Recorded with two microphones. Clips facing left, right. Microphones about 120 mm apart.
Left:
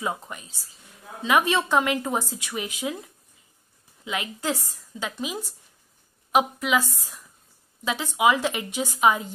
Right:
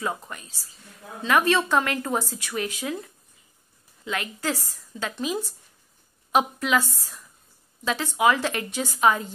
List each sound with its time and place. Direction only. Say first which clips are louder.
0.0 s a woman's voice: even; 15° left (ahead or behind)
4.0 s a woman's voice: even; 15° left (ahead or behind)